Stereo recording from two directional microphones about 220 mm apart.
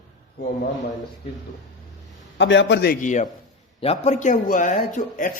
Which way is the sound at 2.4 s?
55° left (ahead or behind).